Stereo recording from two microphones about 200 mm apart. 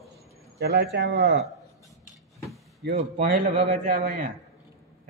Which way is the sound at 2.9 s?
40° right (ahead or behind).